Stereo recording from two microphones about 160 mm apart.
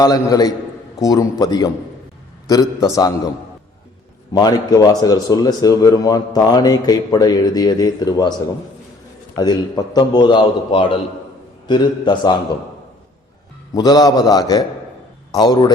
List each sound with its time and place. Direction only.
0.0 s speech: 25° left (ahead or behind)
4.3 s speech: 25° left (ahead or behind)
9.3 s speech: 25° left (ahead or behind)
13.7 s speech: 25° left (ahead or behind)